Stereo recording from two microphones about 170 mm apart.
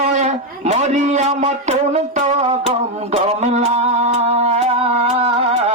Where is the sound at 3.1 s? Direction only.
40° right (ahead or behind).